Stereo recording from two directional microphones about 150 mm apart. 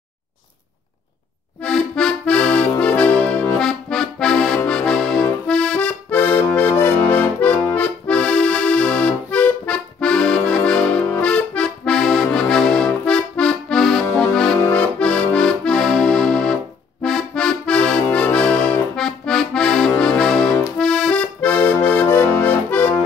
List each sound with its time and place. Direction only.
1.6 s accordion: 5° left (ahead or behind)